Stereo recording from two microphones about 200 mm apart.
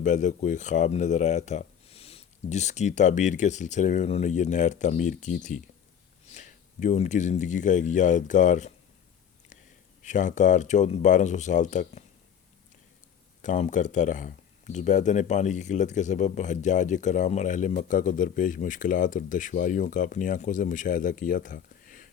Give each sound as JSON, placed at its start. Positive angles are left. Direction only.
{"t": 0.0, "sound": "speech", "side_deg": 40}
{"t": 10.0, "sound": "speech", "side_deg": 40}
{"t": 13.4, "sound": "speech", "side_deg": 40}